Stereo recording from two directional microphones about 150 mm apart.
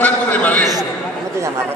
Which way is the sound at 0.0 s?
10° left (ahead or behind).